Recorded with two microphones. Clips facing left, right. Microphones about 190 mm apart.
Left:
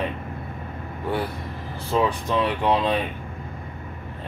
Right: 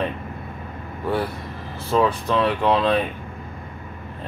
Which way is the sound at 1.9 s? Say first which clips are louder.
Right 3 dB; 15° left (ahead or behind).